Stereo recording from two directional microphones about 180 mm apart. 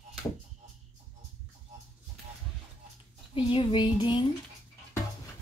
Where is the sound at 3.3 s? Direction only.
30° left (ahead or behind).